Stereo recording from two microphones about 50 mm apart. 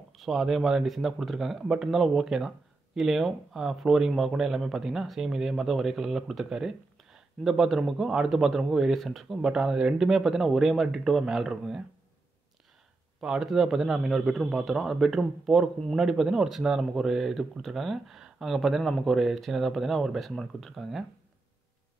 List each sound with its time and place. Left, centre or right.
0.1 s speech: centre
9.5 s speech: centre
13.2 s speech: centre